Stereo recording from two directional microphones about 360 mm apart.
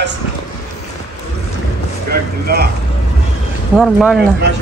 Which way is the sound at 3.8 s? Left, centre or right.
Centre.